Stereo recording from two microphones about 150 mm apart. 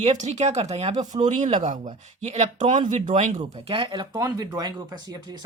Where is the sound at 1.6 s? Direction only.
55° right (ahead or behind).